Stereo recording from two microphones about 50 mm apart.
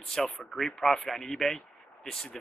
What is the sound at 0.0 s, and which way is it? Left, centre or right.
Speech, centre.